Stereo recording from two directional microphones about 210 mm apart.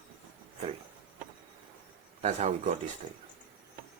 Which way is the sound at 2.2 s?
35° right (ahead or behind).